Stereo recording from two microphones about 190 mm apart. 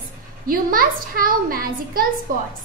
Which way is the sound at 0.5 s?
50° right (ahead or behind).